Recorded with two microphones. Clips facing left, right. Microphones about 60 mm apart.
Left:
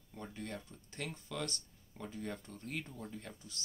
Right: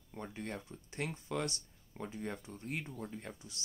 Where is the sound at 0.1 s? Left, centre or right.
Right.